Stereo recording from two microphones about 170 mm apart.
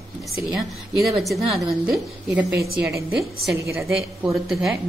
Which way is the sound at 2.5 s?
65° right (ahead or behind).